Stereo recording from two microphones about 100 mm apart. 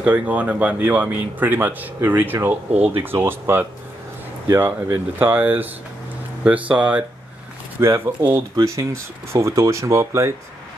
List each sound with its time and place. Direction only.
0.0 s speech: 15° right (ahead or behind)
7.8 s speech: 25° right (ahead or behind)